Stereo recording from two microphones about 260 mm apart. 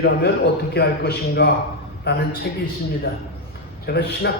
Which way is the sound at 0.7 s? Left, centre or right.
Left.